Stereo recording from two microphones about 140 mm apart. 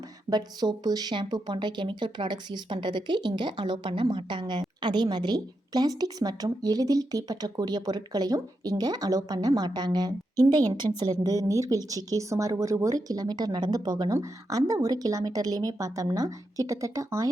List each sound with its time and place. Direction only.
0.3 s a woman's voice: 30° right (ahead or behind)